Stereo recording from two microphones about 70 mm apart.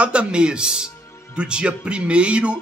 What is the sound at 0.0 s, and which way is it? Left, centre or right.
Speech, centre.